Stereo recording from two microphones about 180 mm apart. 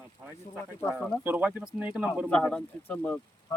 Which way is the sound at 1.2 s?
10° right (ahead or behind).